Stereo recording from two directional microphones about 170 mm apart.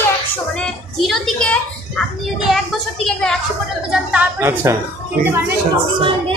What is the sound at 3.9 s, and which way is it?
Speech, 10° right (ahead or behind).